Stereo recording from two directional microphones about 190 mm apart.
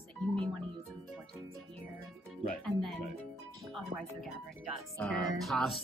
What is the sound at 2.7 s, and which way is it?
Speech, centre (ahead or behind).